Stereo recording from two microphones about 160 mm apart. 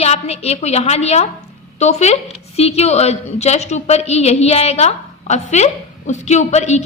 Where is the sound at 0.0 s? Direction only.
40° left (ahead or behind).